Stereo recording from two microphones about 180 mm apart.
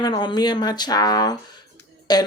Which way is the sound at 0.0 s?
25° left (ahead or behind).